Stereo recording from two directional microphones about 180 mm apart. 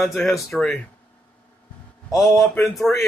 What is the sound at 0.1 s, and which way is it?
Speech, 15° left (ahead or behind).